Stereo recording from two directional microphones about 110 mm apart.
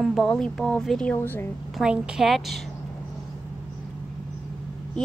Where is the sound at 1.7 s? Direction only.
5° right (ahead or behind).